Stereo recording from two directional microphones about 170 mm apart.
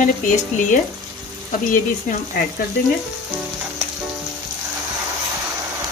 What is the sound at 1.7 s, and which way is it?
Speech, 55° left (ahead or behind).